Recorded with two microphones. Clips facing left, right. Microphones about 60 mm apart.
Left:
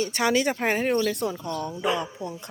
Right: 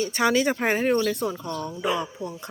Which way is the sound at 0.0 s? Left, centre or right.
Centre.